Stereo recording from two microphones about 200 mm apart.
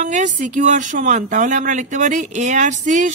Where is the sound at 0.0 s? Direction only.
40° right (ahead or behind).